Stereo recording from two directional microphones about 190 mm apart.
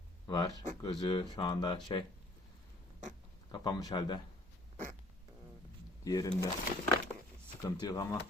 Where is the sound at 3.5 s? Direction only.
20° left (ahead or behind).